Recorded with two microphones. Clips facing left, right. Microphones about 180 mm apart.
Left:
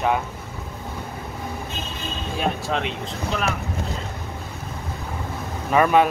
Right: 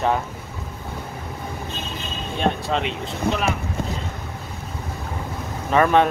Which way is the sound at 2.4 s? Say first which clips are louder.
Right 3 dB; centre (ahead or behind).